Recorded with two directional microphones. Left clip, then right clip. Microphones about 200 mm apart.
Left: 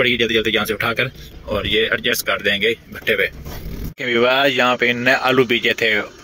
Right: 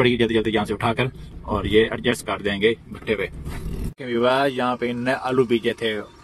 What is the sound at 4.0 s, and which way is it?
Speech, 10° left (ahead or behind).